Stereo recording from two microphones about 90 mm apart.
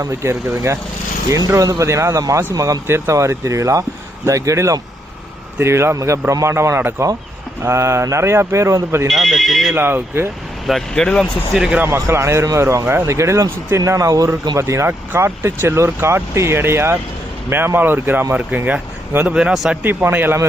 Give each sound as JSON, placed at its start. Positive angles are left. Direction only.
{"t": 0.0, "sound": "speech", "side_deg": -30}
{"t": 9.0, "sound": "speech", "side_deg": 0}
{"t": 9.7, "sound": "speech", "side_deg": -25}
{"t": 10.7, "sound": "speech", "side_deg": 5}
{"t": 11.5, "sound": "speech", "side_deg": -5}
{"t": 11.8, "sound": "speech", "side_deg": -30}
{"t": 19.8, "sound": "speech", "side_deg": -25}